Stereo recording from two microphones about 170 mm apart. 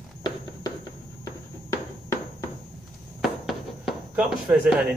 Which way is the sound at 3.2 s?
Centre (ahead or behind).